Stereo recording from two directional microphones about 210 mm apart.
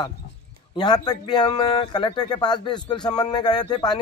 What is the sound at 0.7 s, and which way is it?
Speech, 20° left (ahead or behind).